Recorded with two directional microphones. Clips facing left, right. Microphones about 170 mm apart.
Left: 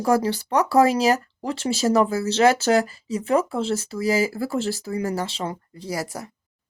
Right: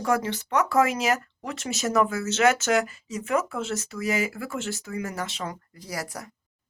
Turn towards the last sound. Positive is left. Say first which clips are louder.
# left 5 dB
turn(degrees=25)  # may be behind; listen again after turning